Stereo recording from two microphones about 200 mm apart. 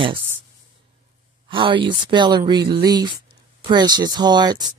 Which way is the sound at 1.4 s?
25° right (ahead or behind).